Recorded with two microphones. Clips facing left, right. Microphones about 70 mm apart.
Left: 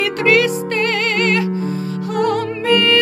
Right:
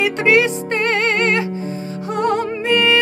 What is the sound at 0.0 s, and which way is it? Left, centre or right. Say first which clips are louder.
Music: even; right.